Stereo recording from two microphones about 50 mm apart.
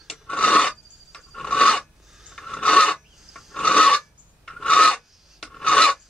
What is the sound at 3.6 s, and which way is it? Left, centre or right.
Filing, left.